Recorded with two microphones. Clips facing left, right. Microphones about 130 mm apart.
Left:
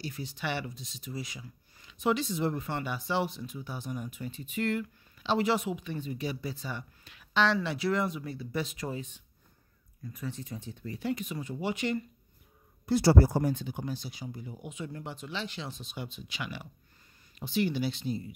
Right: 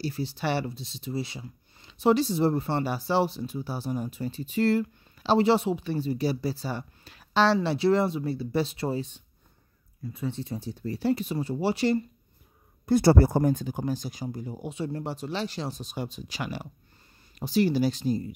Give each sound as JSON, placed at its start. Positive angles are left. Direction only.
{"t": 0.0, "sound": "speech", "side_deg": -30}
{"t": 12.8, "sound": "speech", "side_deg": -50}